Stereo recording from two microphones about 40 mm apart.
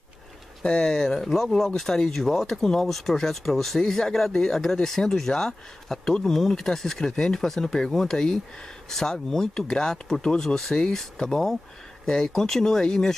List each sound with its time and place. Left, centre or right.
0.7 s speech: centre